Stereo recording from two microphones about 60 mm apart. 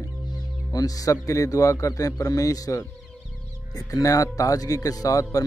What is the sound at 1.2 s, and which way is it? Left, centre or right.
Speech, left.